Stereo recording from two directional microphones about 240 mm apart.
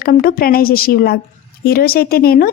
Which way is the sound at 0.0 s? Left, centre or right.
Left.